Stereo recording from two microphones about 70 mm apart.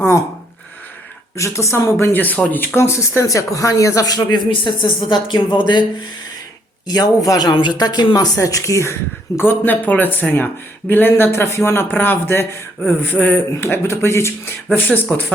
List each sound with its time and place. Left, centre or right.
1.4 s speech: left
2.1 s speech: left
2.7 s speech: left
6.8 s speech: left
8.4 s speech: left
13.5 s speech: left
14.8 s speech: left